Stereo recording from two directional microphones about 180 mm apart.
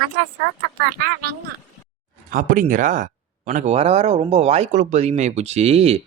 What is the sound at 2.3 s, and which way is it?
Speech, 50° right (ahead or behind).